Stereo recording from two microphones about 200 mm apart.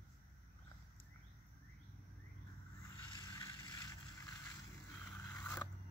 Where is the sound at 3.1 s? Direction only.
20° left (ahead or behind).